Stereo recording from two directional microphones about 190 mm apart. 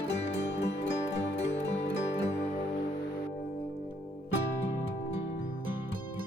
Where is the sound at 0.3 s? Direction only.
65° left (ahead or behind).